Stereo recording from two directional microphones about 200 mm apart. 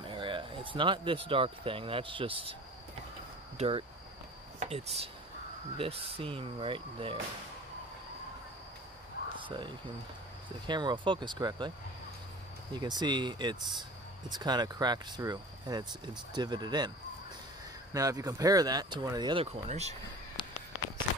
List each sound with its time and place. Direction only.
0.0 s speech: 25° right (ahead or behind)
3.5 s speech: 30° right (ahead or behind)
9.4 s speech: 25° right (ahead or behind)
12.7 s speech: 20° right (ahead or behind)
17.9 s speech: 15° right (ahead or behind); by 20.0 s 35° right (ahead or behind)